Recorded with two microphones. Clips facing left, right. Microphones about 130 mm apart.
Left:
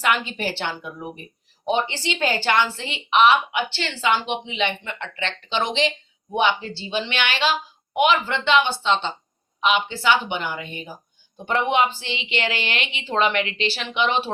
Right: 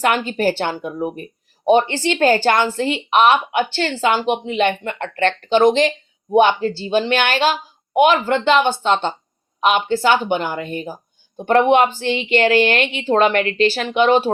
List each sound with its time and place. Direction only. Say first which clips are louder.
0.0 s speech: right 6 dB; 45° right (ahead or behind)